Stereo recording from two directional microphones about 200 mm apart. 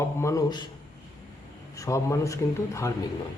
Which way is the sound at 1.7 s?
15° left (ahead or behind).